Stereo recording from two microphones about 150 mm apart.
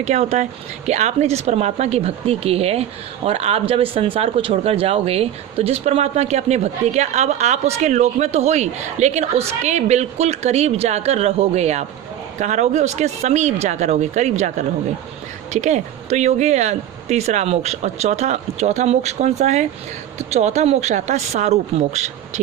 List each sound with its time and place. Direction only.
0.0 s speech: 45° right (ahead or behind)